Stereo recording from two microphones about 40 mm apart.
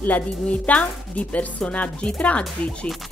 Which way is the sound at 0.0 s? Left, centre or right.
Left.